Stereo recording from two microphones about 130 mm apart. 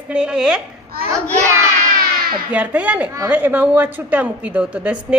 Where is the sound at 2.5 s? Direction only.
10° right (ahead or behind).